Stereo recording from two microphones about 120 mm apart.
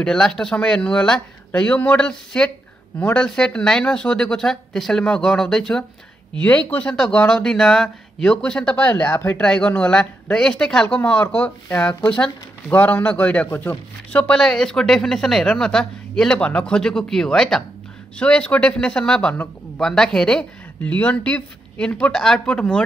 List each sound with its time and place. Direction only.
0.0 s speech: 5° left (ahead or behind)